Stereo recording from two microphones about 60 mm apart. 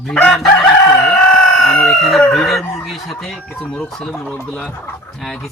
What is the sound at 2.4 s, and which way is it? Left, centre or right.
Speech, centre.